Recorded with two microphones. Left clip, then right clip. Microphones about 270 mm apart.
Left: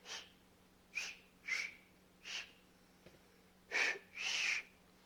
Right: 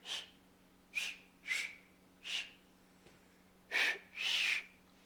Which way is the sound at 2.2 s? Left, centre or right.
Centre.